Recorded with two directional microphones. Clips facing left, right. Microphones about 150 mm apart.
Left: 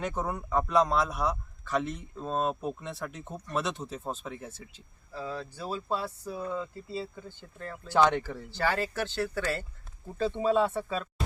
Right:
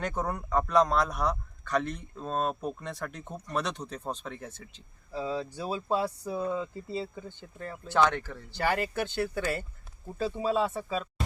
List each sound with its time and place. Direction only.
0.0 s a man's voice: centre (ahead or behind)
5.1 s speech: 15° right (ahead or behind)
7.9 s speech: 15° left (ahead or behind)
8.4 s speech: 15° right (ahead or behind)